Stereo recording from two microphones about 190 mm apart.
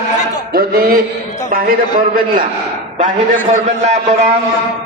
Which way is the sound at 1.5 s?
50° right (ahead or behind).